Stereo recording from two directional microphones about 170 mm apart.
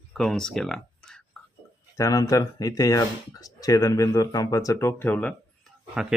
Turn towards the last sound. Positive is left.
turn(degrees=-5)  # may be behind; listen again after turning